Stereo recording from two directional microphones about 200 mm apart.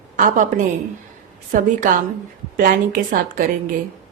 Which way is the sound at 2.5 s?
45° right (ahead or behind).